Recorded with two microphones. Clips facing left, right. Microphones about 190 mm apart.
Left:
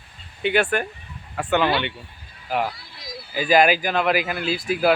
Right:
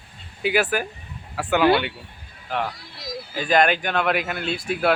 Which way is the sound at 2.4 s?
10° left (ahead or behind).